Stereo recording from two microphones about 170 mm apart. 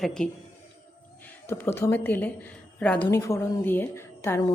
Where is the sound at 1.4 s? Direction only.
15° left (ahead or behind).